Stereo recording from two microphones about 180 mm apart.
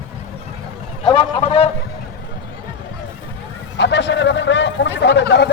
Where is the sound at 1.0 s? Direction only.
30° left (ahead or behind).